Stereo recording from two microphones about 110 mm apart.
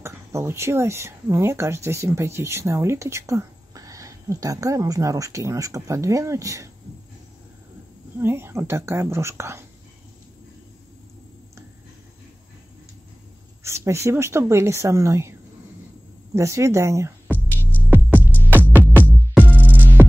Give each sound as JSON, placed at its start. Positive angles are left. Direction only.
{"t": 0.0, "sound": "speech", "side_deg": -25}
{"t": 8.2, "sound": "speech", "side_deg": -20}
{"t": 13.7, "sound": "speech", "side_deg": -25}
{"t": 16.3, "sound": "speech", "side_deg": -25}
{"t": 17.3, "sound": "music", "side_deg": -15}